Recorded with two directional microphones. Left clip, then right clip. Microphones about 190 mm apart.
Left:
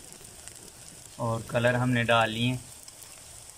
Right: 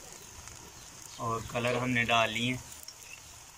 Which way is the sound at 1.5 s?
65° left (ahead or behind).